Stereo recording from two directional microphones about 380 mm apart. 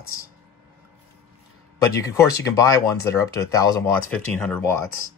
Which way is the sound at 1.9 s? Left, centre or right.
Centre.